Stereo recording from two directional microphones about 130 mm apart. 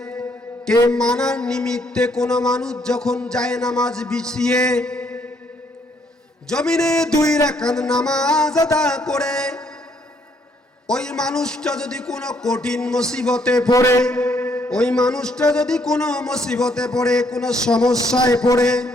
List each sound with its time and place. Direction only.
0.9 s mantra: 5° left (ahead or behind)
6.5 s mantra: 5° left (ahead or behind)
7.2 s a man's voice: 30° left (ahead or behind)
7.4 s mantra: 5° left (ahead or behind)
10.8 s mantra: 5° left (ahead or behind)
13.7 s a man's voice: 25° left (ahead or behind)
14.0 s mantra: 5° left (ahead or behind)